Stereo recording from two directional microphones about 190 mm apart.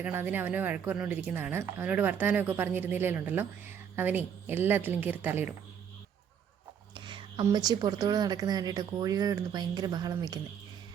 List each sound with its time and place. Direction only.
0.0 s a woman's voice: 10° right (ahead or behind)
6.9 s speech: 25° right (ahead or behind)